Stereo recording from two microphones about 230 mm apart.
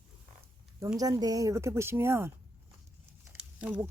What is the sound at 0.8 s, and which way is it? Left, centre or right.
Speech, centre.